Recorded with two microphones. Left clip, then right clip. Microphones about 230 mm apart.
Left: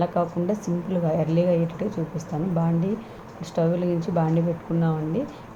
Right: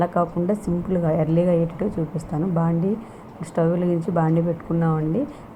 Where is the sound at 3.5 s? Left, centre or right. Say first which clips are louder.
Right 2 dB; centre.